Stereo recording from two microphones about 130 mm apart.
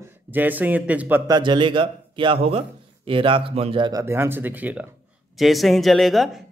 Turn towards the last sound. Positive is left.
turn(degrees=0)  # may be behind; listen again after turning